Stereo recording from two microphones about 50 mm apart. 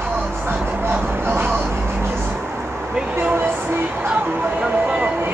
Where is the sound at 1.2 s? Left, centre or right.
Right.